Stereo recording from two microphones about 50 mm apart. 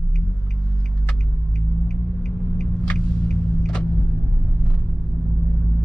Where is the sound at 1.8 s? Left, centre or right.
Centre.